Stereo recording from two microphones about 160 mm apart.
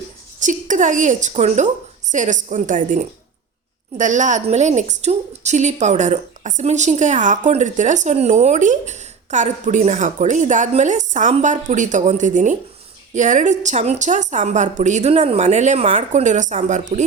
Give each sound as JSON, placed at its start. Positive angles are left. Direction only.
{"t": 0.3, "sound": "a woman's voice", "side_deg": -50}